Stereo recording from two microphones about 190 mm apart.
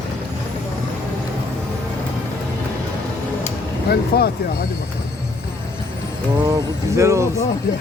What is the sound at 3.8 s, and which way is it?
Speech, 55° left (ahead or behind).